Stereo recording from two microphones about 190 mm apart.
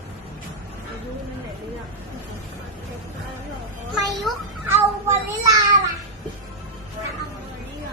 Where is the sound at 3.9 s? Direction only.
Centre (ahead or behind).